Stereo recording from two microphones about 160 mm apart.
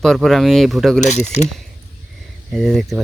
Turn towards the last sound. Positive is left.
turn(degrees=0)  # may be behind; listen again after turning